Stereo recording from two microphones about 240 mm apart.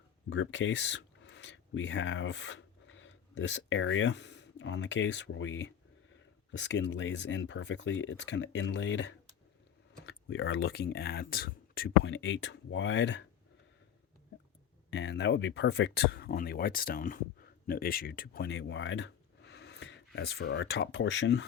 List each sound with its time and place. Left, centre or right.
0.3 s speech: left
14.8 s speech: left